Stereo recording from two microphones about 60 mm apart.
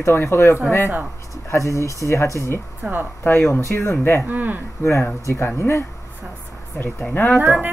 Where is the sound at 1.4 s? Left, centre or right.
Left.